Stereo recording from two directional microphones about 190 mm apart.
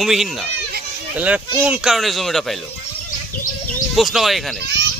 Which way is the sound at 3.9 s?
Centre (ahead or behind).